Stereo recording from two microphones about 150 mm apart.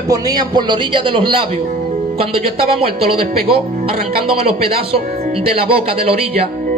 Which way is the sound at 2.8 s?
35° right (ahead or behind).